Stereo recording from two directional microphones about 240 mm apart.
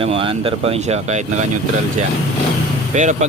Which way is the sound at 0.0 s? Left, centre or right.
Right.